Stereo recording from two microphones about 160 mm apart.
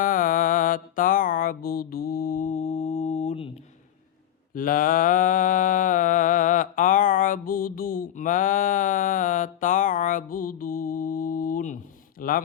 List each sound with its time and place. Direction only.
0.0 s music: 55° left (ahead or behind); by 3.5 s 40° left (ahead or behind)
4.5 s mantra: 60° left (ahead or behind)
12.2 s speech: 65° left (ahead or behind)